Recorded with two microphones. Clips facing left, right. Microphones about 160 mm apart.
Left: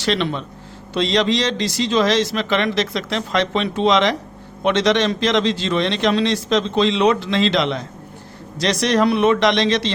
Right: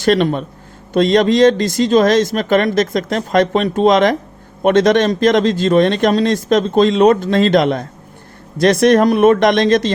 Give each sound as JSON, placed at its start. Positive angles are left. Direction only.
{"t": 0.0, "sound": "a man's voice", "side_deg": -45}